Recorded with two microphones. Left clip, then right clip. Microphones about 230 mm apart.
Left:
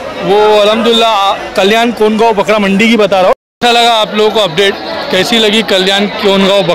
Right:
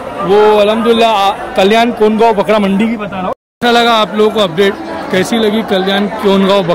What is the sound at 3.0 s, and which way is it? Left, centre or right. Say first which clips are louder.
Speech: left 12 dB; left.